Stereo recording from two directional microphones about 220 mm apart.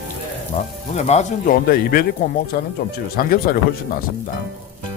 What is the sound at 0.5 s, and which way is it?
Speech, 30° left (ahead or behind).